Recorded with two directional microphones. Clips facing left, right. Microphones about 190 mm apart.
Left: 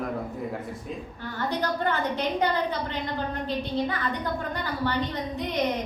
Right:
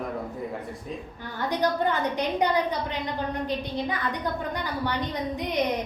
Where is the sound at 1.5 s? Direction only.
15° right (ahead or behind).